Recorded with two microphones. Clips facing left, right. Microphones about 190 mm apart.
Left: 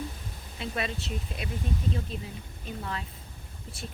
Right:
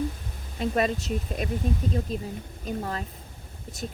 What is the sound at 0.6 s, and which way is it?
Speech, 45° right (ahead or behind).